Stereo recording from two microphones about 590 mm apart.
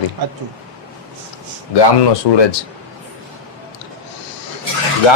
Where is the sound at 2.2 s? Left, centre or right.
Left.